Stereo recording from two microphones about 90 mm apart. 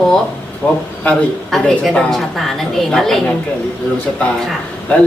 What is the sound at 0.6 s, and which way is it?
Speech, 20° left (ahead or behind).